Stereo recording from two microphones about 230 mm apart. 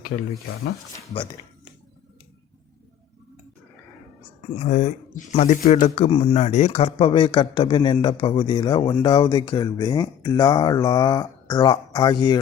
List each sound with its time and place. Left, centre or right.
0.9 s speech: centre
4.5 s speech: left